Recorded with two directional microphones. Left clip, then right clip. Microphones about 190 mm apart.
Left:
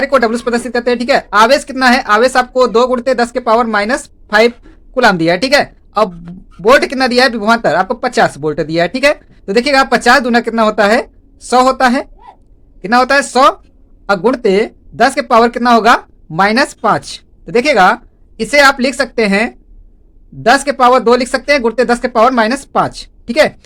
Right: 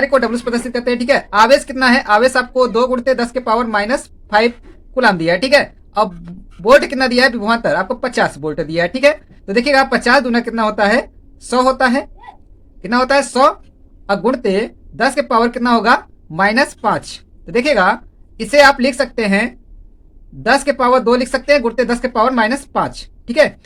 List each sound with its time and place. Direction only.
0.0 s a woman's voice: 35° left (ahead or behind)